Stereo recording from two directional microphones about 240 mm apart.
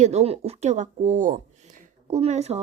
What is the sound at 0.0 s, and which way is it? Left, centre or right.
Speech, right.